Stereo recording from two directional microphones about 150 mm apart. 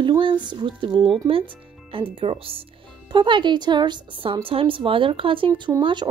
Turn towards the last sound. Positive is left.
turn(degrees=-35)  # may be behind; listen again after turning